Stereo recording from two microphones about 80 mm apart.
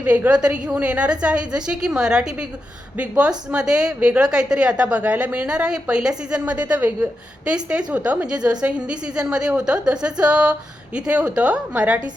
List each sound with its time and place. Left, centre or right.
0.0 s a woman's voice: centre